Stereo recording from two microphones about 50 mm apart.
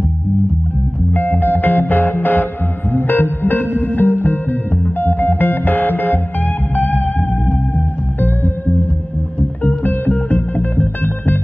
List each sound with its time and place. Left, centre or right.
1.1 s music: left